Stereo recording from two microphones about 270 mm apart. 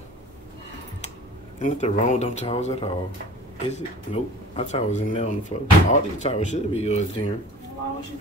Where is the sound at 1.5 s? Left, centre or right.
Left.